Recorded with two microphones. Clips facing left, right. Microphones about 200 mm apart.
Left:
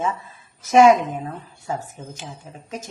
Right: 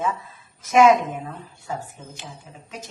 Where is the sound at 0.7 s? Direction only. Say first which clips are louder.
Left 2 dB; 35° left (ahead or behind).